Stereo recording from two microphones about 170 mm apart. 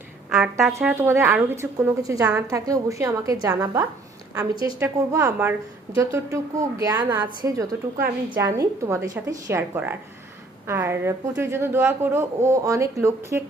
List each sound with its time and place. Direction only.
0.3 s speech: 5° right (ahead or behind)
0.7 s a woman's voice: 15° right (ahead or behind)